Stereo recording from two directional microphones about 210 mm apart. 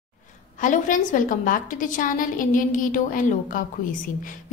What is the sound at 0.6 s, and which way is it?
A woman's voice, 40° left (ahead or behind).